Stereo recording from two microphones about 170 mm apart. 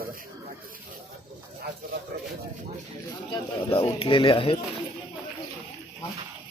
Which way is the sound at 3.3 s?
30° left (ahead or behind).